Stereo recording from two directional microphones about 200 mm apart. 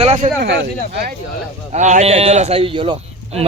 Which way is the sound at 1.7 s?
35° right (ahead or behind).